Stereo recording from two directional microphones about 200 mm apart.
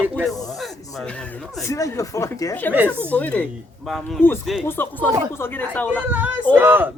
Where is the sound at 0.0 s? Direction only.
10° right (ahead or behind).